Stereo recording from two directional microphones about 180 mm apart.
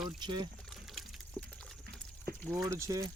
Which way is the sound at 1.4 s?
5° left (ahead or behind).